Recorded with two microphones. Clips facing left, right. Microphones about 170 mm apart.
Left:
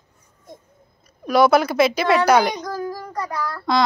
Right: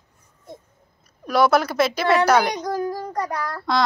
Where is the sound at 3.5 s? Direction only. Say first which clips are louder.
Left 4 dB; centre (ahead or behind).